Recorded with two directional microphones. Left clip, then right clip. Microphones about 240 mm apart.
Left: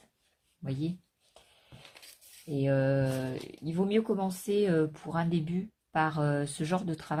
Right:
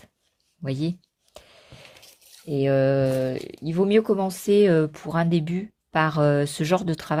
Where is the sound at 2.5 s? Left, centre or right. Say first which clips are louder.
Right 8 dB; right.